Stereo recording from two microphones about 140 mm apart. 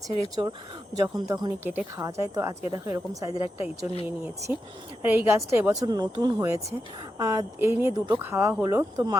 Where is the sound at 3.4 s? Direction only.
45° left (ahead or behind).